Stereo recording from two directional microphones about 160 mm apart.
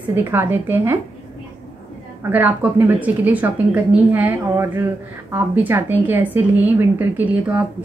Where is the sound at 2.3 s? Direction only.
10° right (ahead or behind).